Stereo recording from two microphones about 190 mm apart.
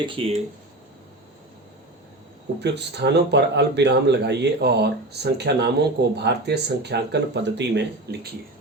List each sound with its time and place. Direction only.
0.0 s speech: 30° right (ahead or behind)
2.6 s a man's voice: 60° right (ahead or behind)